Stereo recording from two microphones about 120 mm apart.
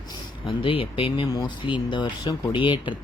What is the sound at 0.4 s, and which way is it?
Speech, 45° left (ahead or behind).